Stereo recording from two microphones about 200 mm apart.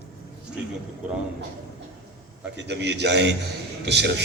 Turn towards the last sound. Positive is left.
turn(degrees=-60)  # may be behind; listen again after turning